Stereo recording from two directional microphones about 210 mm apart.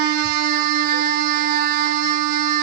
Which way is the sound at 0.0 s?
45° right (ahead or behind).